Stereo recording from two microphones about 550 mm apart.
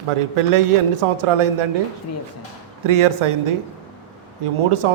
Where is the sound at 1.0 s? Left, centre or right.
Right.